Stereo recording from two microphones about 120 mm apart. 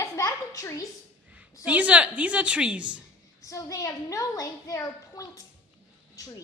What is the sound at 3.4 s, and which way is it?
A woman's voice, 30° left (ahead or behind).